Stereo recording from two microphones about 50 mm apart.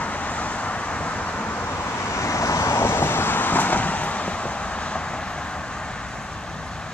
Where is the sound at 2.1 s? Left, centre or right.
Left.